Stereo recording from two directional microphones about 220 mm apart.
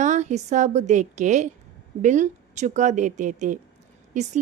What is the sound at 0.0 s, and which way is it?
A woman's voice, 30° right (ahead or behind).